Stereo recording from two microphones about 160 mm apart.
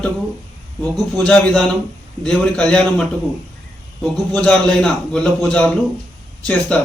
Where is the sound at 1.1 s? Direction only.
5° left (ahead or behind).